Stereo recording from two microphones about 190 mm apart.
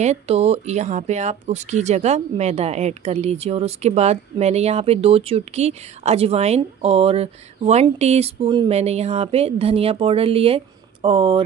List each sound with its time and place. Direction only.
0.0 s speech: 35° right (ahead or behind)